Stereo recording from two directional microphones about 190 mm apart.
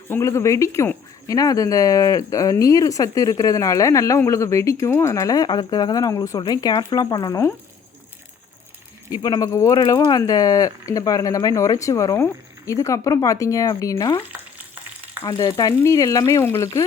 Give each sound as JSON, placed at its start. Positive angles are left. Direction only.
{"t": 0.1, "sound": "speech", "side_deg": 15}
{"t": 9.2, "sound": "speech", "side_deg": 20}